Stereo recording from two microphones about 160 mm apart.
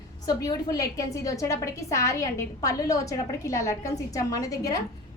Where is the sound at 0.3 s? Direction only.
25° left (ahead or behind).